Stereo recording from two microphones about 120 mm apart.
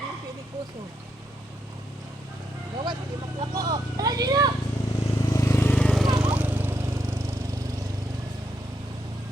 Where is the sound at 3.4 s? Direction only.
30° right (ahead or behind).